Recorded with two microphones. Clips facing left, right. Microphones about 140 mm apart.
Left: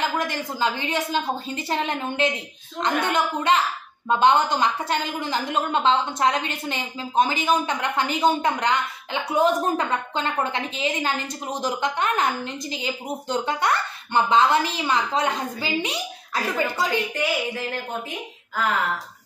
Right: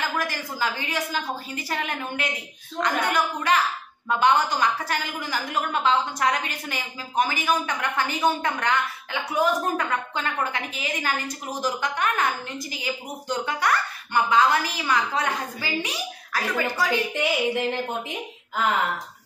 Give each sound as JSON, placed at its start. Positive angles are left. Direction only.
{"t": 0.0, "sound": "a woman's voice", "side_deg": 20}
{"t": 17.1, "sound": "speech", "side_deg": -20}